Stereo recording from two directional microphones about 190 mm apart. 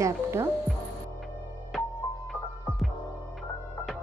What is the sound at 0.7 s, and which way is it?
Music, centre (ahead or behind).